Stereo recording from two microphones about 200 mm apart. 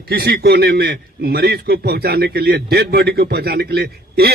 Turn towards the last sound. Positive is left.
turn(degrees=-50)  # may be behind; listen again after turning